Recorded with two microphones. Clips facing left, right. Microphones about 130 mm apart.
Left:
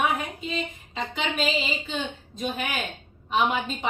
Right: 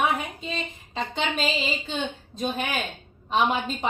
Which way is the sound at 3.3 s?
35° right (ahead or behind).